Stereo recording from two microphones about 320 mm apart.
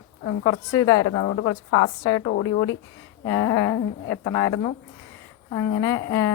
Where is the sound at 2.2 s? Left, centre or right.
Left.